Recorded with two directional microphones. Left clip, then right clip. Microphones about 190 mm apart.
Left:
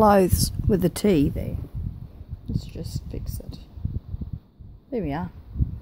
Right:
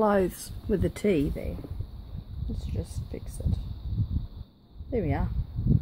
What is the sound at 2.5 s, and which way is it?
Speech, 40° left (ahead or behind).